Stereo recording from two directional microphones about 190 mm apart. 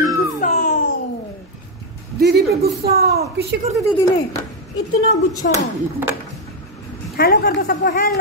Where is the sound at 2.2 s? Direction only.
55° right (ahead or behind).